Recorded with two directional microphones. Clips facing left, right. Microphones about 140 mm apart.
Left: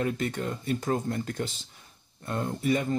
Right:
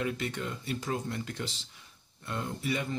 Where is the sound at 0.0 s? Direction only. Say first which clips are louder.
Left 4 dB; 45° left (ahead or behind).